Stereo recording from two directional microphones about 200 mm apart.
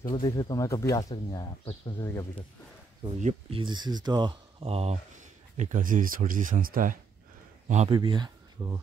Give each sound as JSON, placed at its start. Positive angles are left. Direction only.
{"t": 0.1, "sound": "speech", "side_deg": 20}
{"t": 3.2, "sound": "speech", "side_deg": -35}
{"t": 7.9, "sound": "speech", "side_deg": -25}